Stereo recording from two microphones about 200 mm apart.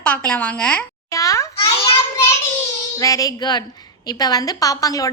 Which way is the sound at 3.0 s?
15° left (ahead or behind).